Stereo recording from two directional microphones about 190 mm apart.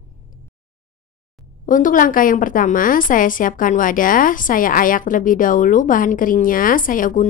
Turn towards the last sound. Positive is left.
turn(degrees=45)  # may be behind; listen again after turning